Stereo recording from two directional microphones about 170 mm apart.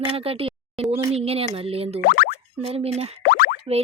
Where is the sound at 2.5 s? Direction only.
35° right (ahead or behind).